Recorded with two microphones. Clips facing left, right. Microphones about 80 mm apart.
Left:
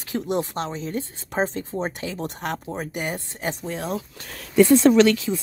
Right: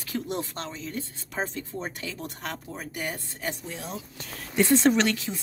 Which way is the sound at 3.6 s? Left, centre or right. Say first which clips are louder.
Left 9 dB; left.